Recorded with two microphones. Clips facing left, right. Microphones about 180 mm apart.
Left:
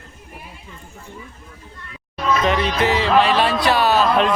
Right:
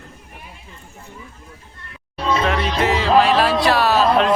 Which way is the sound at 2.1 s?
30° right (ahead or behind).